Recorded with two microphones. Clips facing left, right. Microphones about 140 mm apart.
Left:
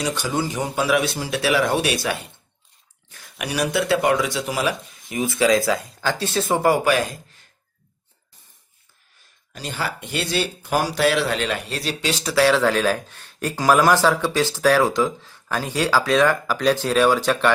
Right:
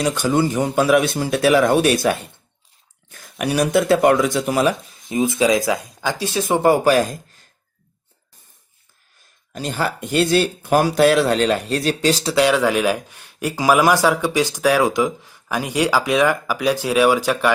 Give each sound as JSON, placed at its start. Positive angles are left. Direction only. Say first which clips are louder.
{"t": 0.0, "sound": "speech", "louder": "right 6 dB", "side_deg": -50}
{"t": 5.0, "sound": "speech", "louder": "right 2 dB", "side_deg": -20}
{"t": 6.8, "sound": "speech", "louder": "right 4 dB", "side_deg": -40}
{"t": 9.5, "sound": "speech", "louder": "right 5 dB", "side_deg": -45}
{"t": 12.2, "sound": "speech", "louder": "left 2 dB", "side_deg": -20}